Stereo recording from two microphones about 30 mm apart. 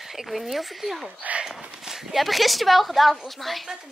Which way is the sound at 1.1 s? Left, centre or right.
Right.